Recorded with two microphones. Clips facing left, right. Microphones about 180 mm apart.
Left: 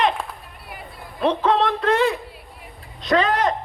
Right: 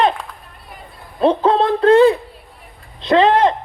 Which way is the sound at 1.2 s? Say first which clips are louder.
Right 5 dB; 30° right (ahead or behind).